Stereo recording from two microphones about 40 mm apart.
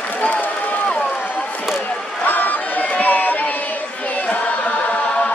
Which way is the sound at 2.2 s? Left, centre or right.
Left.